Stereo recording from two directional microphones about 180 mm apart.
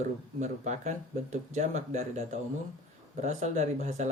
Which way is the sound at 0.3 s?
40° right (ahead or behind).